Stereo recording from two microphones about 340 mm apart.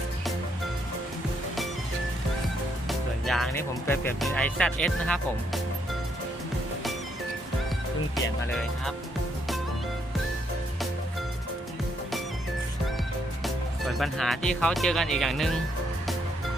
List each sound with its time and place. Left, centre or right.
3.2 s speech: centre
8.1 s speech: centre
13.4 s speech: centre